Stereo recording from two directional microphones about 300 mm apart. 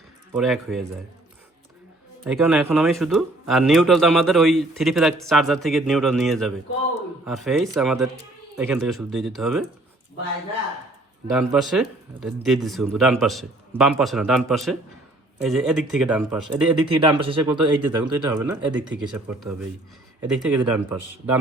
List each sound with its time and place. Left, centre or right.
0.3 s speech: centre
2.2 s speech: centre
11.3 s speech: centre
16.8 s speech: centre